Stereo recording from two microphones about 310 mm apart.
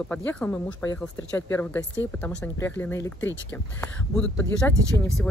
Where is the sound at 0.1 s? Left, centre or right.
Centre.